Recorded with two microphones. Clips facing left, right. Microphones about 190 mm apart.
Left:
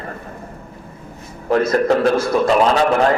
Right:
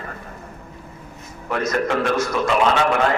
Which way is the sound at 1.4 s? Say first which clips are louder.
Left 7 dB; 35° left (ahead or behind).